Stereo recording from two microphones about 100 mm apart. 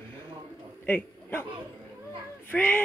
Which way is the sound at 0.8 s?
20° left (ahead or behind).